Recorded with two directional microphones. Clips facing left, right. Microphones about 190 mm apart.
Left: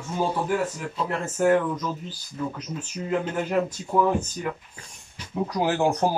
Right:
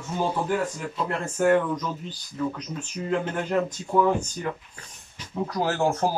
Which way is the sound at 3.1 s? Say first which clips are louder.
Even; 10° left (ahead or behind).